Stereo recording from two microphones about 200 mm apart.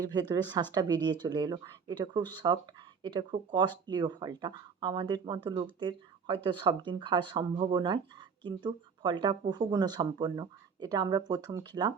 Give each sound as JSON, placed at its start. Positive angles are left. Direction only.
{"t": 0.0, "sound": "speech", "side_deg": -20}